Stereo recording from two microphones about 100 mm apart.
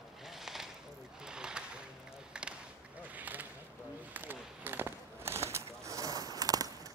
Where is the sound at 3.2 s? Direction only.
15° right (ahead or behind).